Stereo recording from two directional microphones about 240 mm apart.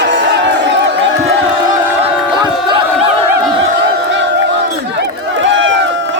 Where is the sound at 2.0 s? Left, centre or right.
Right.